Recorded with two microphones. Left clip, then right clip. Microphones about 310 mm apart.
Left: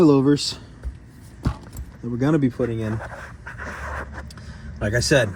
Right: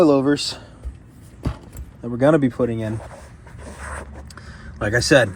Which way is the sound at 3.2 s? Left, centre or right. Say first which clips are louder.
Left 8 dB; right.